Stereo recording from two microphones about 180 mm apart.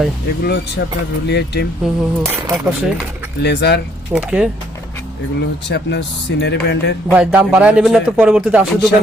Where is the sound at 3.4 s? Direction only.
65° left (ahead or behind).